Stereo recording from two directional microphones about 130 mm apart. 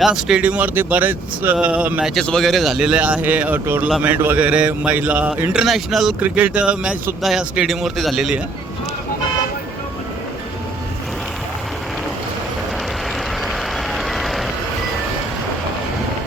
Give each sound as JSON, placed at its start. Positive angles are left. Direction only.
{"t": 0.0, "sound": "speech", "side_deg": -5}
{"t": 2.1, "sound": "speech", "side_deg": 5}
{"t": 13.9, "sound": "vehicle", "side_deg": 0}